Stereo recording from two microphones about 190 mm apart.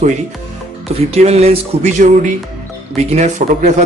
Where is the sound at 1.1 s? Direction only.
35° right (ahead or behind).